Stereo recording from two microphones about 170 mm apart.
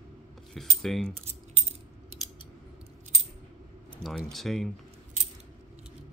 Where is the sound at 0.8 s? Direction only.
Centre (ahead or behind).